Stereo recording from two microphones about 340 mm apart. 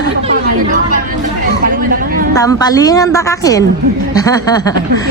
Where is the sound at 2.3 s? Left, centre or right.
Centre.